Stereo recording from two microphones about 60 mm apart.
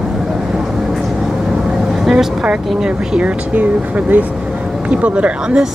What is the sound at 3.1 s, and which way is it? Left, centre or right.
Speech, right.